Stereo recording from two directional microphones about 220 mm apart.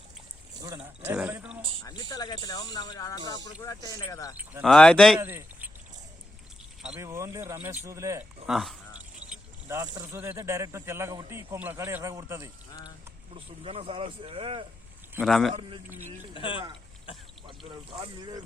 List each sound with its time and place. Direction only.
1.0 s speech: 5° right (ahead or behind)
1.8 s speech: 15° left (ahead or behind)
4.6 s speech: 5° left (ahead or behind)
5.2 s a sound: 10° right (ahead or behind)
6.8 s speech: 10° right (ahead or behind)
8.4 s speech: centre (ahead or behind)
9.3 s speech: 10° right (ahead or behind)
13.3 s speech: 25° right (ahead or behind)
15.1 s speech: centre (ahead or behind)
16.3 s speech: 25° left (ahead or behind)